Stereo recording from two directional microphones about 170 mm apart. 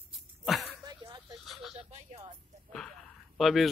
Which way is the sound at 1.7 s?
40° right (ahead or behind).